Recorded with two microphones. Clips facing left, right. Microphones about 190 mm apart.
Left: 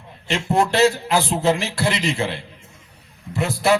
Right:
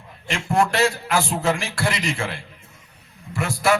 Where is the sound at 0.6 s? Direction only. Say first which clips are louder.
Left 3 dB; 30° left (ahead or behind).